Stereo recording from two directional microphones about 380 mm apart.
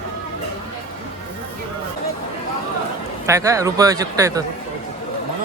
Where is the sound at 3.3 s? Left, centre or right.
Centre.